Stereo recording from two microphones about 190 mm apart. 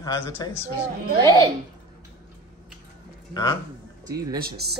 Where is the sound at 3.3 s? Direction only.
20° left (ahead or behind).